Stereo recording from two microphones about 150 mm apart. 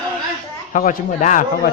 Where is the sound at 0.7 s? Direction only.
60° left (ahead or behind).